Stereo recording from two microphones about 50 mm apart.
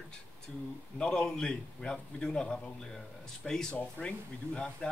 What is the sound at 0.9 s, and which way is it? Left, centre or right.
A man's voice, centre.